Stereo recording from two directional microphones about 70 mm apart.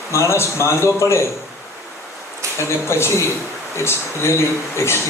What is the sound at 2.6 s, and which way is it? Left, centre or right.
A man's voice, left.